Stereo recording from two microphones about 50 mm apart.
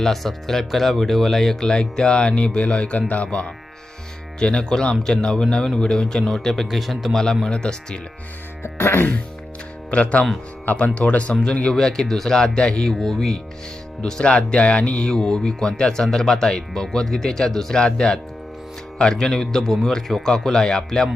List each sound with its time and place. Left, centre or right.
0.0 s speech: centre
7.4 s speech: centre
8.6 s music: left
9.9 s speech: left
11.7 s speech: centre
14.0 s speech: centre